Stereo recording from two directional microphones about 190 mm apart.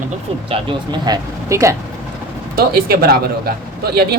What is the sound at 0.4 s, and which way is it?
Speech, 30° right (ahead or behind).